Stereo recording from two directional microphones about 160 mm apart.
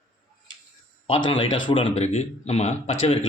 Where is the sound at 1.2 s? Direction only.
35° left (ahead or behind).